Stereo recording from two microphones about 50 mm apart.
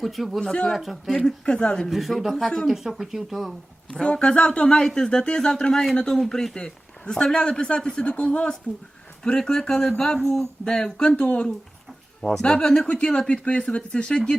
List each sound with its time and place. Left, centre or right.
0.0 s speech: centre
1.1 s a man's voice: centre
1.9 s speech: centre
4.1 s a man's voice: left